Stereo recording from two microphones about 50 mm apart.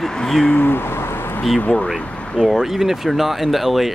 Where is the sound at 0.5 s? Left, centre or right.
Left.